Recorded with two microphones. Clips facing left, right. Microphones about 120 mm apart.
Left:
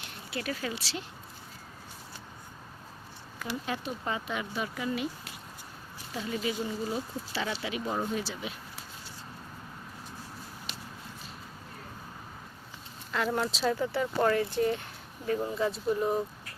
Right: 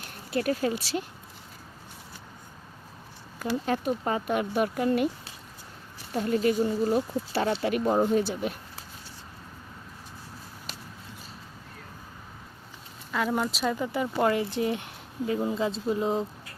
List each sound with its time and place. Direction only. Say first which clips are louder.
0.3 s speech: right 8 dB; 45° right (ahead or behind)
3.3 s speech: right 7 dB; 40° right (ahead or behind)
6.1 s speech: right 8 dB; 50° right (ahead or behind)
13.1 s speech: right 2 dB; centre (ahead or behind); by 16.2 s 20° right (ahead or behind)